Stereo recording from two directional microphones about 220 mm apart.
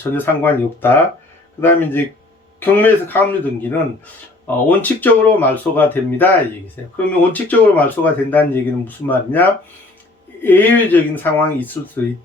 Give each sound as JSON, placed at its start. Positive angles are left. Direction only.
{"t": 0.0, "sound": "speech", "side_deg": 10}